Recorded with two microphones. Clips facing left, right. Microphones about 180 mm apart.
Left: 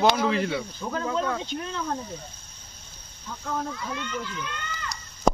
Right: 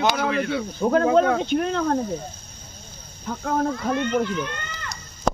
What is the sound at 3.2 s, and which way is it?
Speech, 60° right (ahead or behind).